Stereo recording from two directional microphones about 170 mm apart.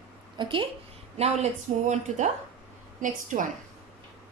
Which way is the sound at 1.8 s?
45° right (ahead or behind).